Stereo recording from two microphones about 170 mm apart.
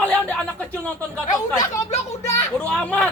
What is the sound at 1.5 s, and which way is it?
Speech, 20° left (ahead or behind).